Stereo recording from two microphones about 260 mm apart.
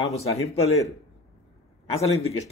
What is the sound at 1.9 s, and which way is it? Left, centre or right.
Speech, left.